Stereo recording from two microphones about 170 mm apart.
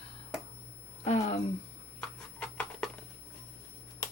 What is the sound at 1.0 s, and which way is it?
Speech, 40° left (ahead or behind).